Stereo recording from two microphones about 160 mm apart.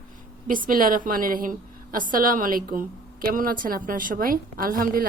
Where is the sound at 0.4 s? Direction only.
60° right (ahead or behind).